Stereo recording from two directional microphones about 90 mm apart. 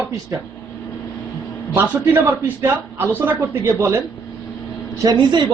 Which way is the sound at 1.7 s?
20° right (ahead or behind).